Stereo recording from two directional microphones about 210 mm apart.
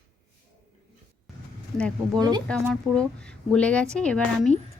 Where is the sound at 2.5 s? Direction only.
5° left (ahead or behind).